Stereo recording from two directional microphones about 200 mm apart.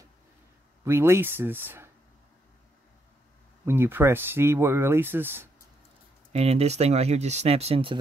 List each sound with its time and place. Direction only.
0.8 s speech: 10° right (ahead or behind)
3.6 s speech: 10° right (ahead or behind)
6.3 s speech: 30° right (ahead or behind)